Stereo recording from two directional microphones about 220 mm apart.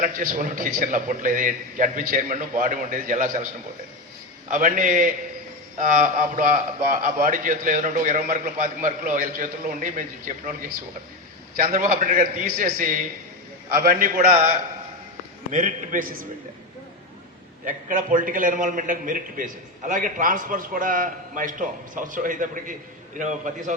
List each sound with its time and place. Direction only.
0.0 s a man's voice: 40° right (ahead or behind)
11.5 s a man's voice: 35° right (ahead or behind)
15.5 s a man's voice: 35° right (ahead or behind)
17.7 s a man's voice: 35° right (ahead or behind)